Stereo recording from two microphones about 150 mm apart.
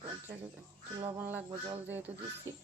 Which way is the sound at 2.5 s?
20° right (ahead or behind).